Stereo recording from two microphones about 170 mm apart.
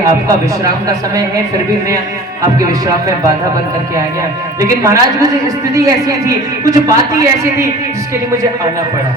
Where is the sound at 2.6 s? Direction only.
20° right (ahead or behind).